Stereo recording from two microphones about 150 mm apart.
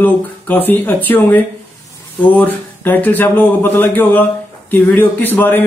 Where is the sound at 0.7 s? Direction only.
15° left (ahead or behind).